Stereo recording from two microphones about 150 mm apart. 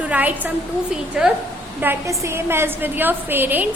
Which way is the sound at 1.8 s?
15° right (ahead or behind).